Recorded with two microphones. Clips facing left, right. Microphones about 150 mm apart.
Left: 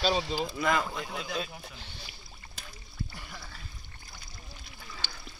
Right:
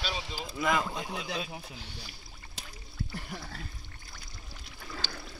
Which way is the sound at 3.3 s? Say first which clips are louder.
Right 5 dB; 50° right (ahead or behind).